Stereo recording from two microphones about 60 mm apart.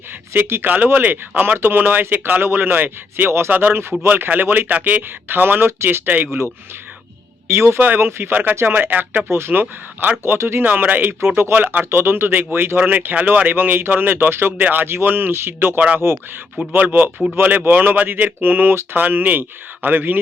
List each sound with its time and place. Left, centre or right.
0.3 s speech: right
3.5 s speech: right
7.4 s speech: right
10.7 s speech: right
11.9 s speech: right